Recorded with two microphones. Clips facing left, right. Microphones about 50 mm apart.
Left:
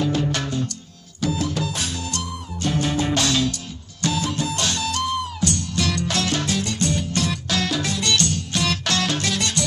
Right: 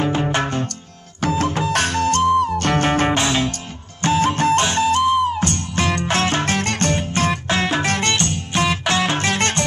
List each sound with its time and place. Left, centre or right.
0.0 s music: right
1.7 s music: right
2.4 s music: right
3.2 s music: right
4.6 s music: right
7.0 s music: right
7.8 s music: right
8.1 s music: right